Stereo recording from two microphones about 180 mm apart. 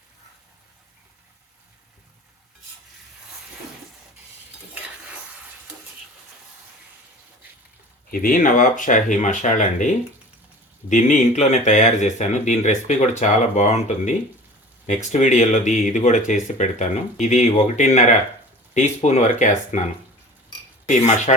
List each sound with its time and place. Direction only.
8.1 s speech: 50° left (ahead or behind)
21.3 s speech: 35° left (ahead or behind)